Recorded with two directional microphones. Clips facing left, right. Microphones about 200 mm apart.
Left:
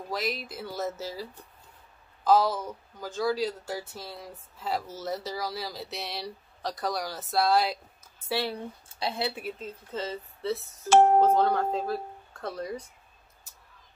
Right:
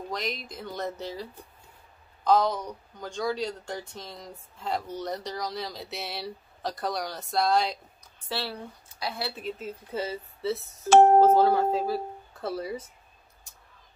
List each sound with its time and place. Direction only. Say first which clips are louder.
0.1 s speech: left 4 dB; 5° left (ahead or behind)
2.2 s speech: even; 5° left (ahead or behind)
8.8 s a woman's voice: left 3 dB; 25° left (ahead or behind)
9.3 s a woman's voice: right 1 dB; 10° left (ahead or behind)
9.6 s speech: right 2 dB; 10° right (ahead or behind)